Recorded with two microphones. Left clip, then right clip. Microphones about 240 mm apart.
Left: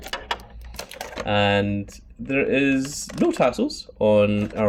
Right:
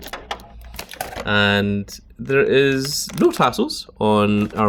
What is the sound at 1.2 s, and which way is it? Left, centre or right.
Speech, right.